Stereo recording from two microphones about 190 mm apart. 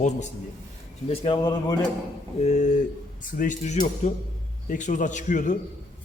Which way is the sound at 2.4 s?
40° left (ahead or behind).